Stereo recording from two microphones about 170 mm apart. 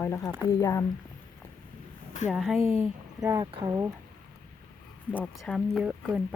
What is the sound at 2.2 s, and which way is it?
Speech, 5° right (ahead or behind).